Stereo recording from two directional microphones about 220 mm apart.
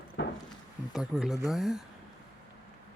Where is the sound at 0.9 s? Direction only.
Centre (ahead or behind).